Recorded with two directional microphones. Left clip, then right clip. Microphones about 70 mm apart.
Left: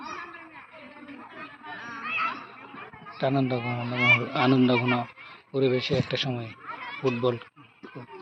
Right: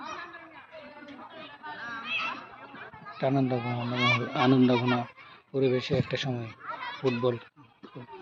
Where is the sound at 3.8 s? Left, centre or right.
Centre.